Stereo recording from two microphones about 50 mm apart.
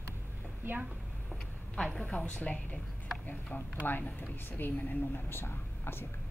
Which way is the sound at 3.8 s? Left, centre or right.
Left.